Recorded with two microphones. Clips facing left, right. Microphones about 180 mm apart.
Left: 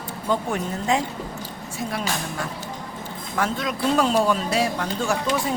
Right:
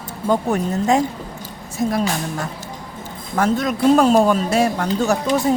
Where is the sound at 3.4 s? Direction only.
45° right (ahead or behind).